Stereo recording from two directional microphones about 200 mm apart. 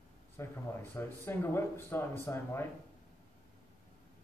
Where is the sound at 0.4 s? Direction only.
15° left (ahead or behind).